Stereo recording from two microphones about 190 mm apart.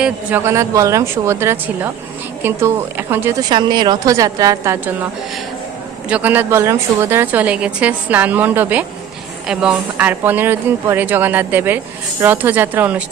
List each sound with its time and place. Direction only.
0.0 s a woman's voice: 10° right (ahead or behind)
3.5 s a woman's voice: 25° right (ahead or behind)
6.1 s a woman's voice: 5° right (ahead or behind)